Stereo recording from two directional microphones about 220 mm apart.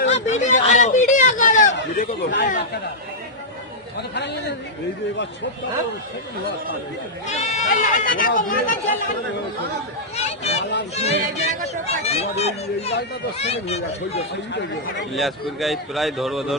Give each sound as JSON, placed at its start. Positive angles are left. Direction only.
{"t": 0.1, "sound": "a sound", "side_deg": 30}
{"t": 2.3, "sound": "speech", "side_deg": 45}
{"t": 7.3, "sound": "speech", "side_deg": 35}
{"t": 10.2, "sound": "a sound", "side_deg": 30}
{"t": 10.6, "sound": "speech", "side_deg": 50}
{"t": 10.9, "sound": "speech", "side_deg": 30}
{"t": 15.1, "sound": "a man's voice", "side_deg": 0}